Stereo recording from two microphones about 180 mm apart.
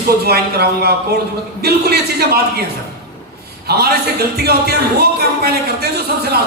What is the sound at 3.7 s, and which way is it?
A man's voice, 60° right (ahead or behind).